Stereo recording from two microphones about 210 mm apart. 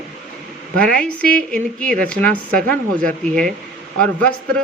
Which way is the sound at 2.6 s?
40° right (ahead or behind).